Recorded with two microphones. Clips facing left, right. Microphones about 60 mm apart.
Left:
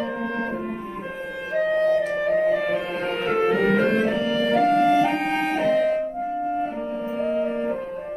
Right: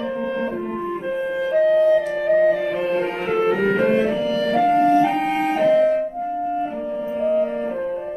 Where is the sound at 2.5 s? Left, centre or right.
Centre.